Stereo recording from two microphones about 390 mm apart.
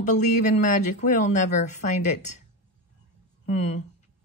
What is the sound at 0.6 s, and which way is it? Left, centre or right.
Speech, centre.